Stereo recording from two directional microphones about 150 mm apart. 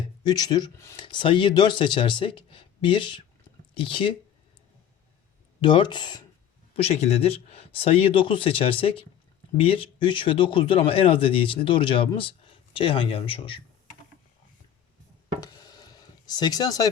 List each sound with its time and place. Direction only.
0.3 s speech: 25° left (ahead or behind)
5.5 s speech: 30° left (ahead or behind)
6.7 s speech: 45° left (ahead or behind)
15.4 s a sound: 25° left (ahead or behind)